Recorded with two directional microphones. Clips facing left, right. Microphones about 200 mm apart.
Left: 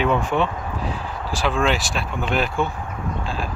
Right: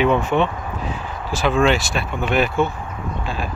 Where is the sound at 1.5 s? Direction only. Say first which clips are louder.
Right 4 dB; centre (ahead or behind).